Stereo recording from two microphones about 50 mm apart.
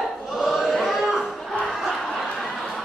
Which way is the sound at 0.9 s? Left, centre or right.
Centre.